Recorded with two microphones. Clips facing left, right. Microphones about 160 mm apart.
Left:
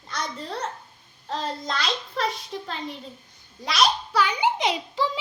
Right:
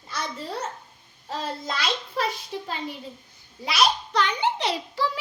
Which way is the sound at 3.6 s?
Centre (ahead or behind).